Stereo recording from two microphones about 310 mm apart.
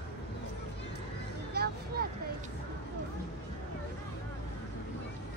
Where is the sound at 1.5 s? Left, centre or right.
Right.